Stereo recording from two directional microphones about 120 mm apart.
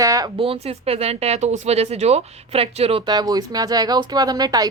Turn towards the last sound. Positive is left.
turn(degrees=-30)  # may be behind; listen again after turning